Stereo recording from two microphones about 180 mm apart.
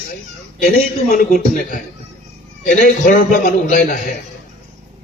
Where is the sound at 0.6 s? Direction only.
50° left (ahead or behind).